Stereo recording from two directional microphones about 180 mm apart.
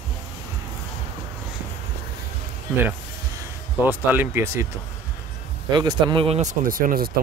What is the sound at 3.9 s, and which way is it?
Speech, 10° right (ahead or behind).